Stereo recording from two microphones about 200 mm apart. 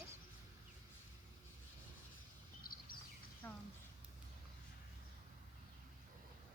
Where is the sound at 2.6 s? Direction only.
45° left (ahead or behind).